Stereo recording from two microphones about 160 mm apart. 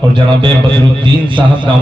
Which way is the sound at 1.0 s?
30° right (ahead or behind).